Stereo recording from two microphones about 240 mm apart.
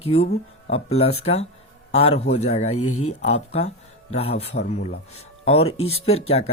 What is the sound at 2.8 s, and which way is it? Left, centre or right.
Speech, left.